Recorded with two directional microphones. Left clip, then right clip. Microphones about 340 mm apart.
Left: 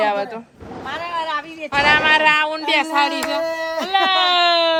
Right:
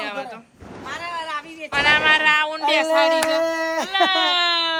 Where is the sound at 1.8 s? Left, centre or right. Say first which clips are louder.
Left 2 dB; centre.